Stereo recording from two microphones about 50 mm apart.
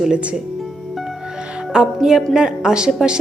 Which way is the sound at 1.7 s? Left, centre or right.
Centre.